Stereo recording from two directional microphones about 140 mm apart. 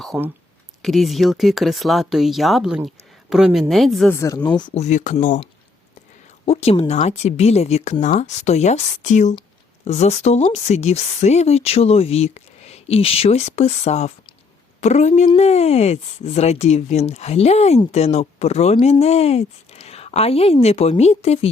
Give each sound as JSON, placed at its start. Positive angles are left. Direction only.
{"t": 0.8, "sound": "speech", "side_deg": 0}
{"t": 4.1, "sound": "speech", "side_deg": 20}
{"t": 4.4, "sound": "speech", "side_deg": 30}
{"t": 4.7, "sound": "speech", "side_deg": 55}
{"t": 6.4, "sound": "speech", "side_deg": 45}